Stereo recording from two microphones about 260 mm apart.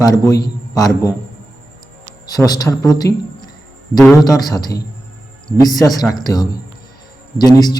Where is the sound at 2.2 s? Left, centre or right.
Centre.